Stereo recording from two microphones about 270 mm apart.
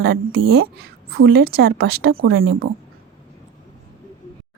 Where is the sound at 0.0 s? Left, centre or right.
Right.